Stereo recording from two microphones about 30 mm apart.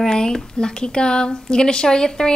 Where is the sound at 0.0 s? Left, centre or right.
Left.